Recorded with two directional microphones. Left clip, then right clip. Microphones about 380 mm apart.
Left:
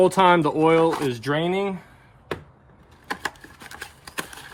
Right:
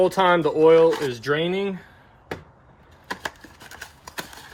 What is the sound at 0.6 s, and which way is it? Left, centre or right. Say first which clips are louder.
Speech: right 3 dB; left.